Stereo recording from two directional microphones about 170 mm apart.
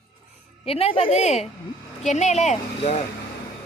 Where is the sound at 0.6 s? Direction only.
35° left (ahead or behind).